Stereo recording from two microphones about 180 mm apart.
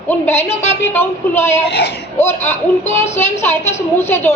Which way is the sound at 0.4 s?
35° left (ahead or behind).